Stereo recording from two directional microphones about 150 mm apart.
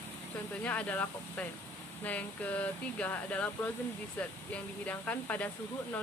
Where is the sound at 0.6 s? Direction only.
10° left (ahead or behind).